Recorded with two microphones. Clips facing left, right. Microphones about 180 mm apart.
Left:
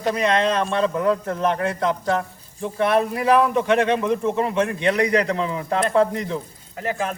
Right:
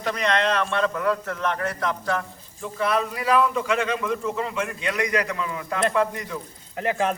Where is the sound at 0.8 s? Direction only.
30° left (ahead or behind).